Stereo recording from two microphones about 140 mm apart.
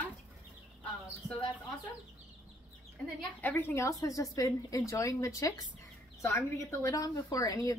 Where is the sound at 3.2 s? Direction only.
10° left (ahead or behind).